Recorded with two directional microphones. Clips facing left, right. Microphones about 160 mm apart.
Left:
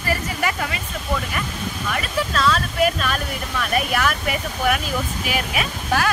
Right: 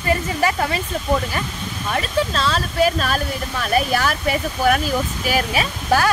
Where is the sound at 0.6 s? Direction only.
35° right (ahead or behind).